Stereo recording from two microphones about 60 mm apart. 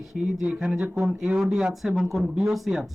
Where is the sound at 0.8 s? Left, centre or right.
Right.